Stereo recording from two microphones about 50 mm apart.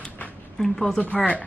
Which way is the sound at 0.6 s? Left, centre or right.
Centre.